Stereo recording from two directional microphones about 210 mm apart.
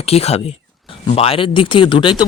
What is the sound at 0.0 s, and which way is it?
Speech, 30° left (ahead or behind).